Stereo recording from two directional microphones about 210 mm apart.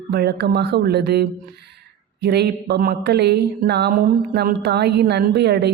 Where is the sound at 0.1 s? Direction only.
50° right (ahead or behind).